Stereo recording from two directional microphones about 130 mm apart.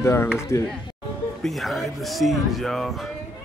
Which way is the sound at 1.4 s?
Centre (ahead or behind).